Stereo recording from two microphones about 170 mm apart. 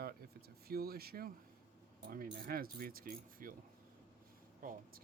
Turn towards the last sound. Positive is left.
turn(degrees=-55)  # may be behind; listen again after turning